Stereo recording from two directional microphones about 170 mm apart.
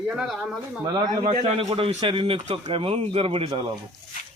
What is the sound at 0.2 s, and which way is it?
Speech, 5° right (ahead or behind).